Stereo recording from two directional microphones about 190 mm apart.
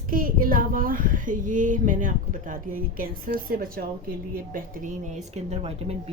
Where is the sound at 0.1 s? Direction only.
50° right (ahead or behind).